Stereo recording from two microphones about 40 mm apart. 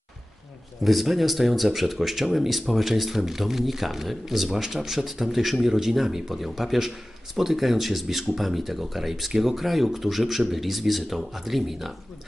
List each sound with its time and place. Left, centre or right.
0.8 s speech: centre